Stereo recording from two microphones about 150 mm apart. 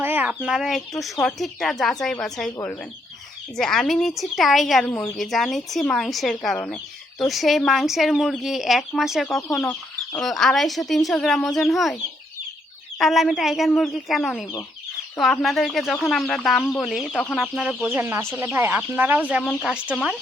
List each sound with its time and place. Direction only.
0.0 s speech: 10° right (ahead or behind)
3.6 s speech: 5° left (ahead or behind)
4.9 s speech: 20° left (ahead or behind)
5.1 s speech: centre (ahead or behind)
13.0 s speech: centre (ahead or behind)
15.2 s speech: centre (ahead or behind)